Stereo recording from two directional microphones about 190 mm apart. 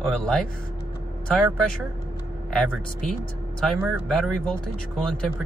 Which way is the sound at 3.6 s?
Centre (ahead or behind).